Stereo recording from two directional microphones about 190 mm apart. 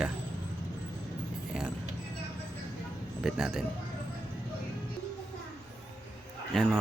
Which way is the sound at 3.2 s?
Centre (ahead or behind).